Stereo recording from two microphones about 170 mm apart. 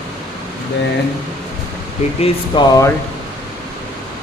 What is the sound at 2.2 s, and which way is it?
Speech, 25° left (ahead or behind).